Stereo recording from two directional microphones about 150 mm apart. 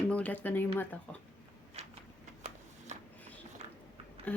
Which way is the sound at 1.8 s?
45° right (ahead or behind).